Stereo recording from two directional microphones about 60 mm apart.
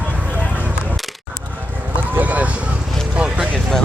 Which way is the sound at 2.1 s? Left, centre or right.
Right.